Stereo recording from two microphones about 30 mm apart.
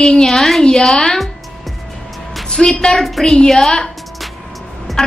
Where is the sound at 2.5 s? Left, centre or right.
Left.